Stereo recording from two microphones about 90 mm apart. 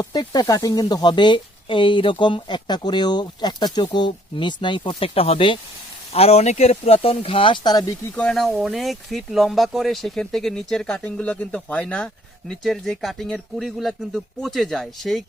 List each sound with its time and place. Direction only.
0.0 s speech: 50° left (ahead or behind)
8.1 s speech: 10° left (ahead or behind)
8.5 s speech: 5° right (ahead or behind)